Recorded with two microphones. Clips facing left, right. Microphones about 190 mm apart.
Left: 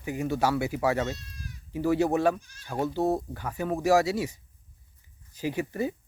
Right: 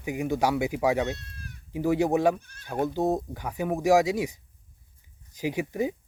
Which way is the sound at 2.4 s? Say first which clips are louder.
Right 3 dB; 60° right (ahead or behind).